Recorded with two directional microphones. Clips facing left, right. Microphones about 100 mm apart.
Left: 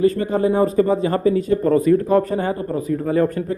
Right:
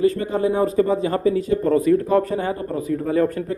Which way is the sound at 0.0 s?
45° left (ahead or behind).